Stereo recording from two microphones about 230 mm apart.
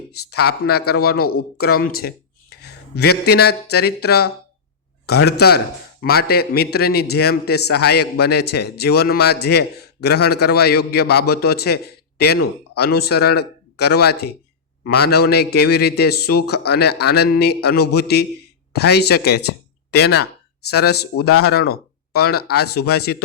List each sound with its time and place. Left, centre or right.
0.3 s a man's voice: left